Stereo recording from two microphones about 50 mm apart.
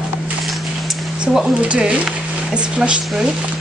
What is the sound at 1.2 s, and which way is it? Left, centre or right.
Speech, centre.